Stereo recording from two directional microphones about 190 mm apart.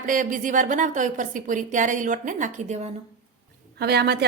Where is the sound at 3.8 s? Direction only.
60° right (ahead or behind).